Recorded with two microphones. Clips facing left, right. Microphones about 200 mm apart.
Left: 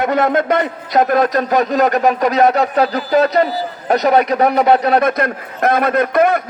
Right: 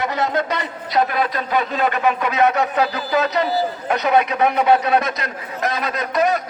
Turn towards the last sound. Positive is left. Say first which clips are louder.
# left 6 dB
turn(degrees=55)  # may be behind; listen again after turning